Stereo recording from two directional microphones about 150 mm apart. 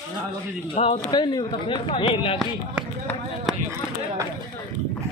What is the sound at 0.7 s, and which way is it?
A man's voice, 40° left (ahead or behind).